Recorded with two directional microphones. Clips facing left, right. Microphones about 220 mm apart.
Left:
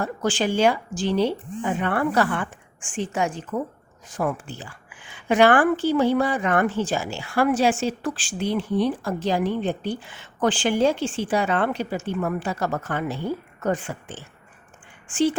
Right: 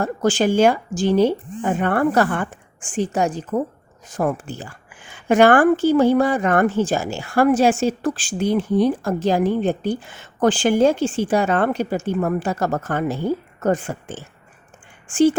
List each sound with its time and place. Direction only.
0.0 s a woman's voice: 45° right (ahead or behind)